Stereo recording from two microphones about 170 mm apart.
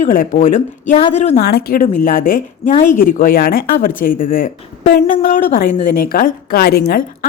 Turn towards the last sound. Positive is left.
turn(degrees=60)  # may be behind; listen again after turning